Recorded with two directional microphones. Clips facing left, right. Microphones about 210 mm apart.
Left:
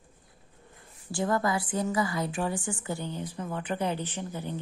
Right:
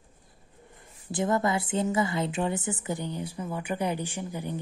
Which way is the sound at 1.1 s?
20° right (ahead or behind).